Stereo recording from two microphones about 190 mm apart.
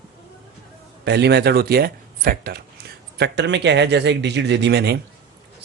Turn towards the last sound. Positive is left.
turn(degrees=-60)  # may be behind; listen again after turning